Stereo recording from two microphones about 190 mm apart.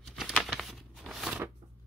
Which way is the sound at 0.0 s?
Centre (ahead or behind).